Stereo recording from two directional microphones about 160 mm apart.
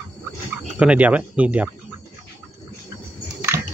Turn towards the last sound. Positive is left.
turn(degrees=-20)  # may be behind; listen again after turning